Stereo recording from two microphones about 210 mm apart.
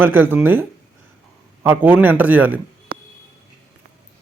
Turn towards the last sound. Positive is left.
turn(degrees=-45)  # may be behind; listen again after turning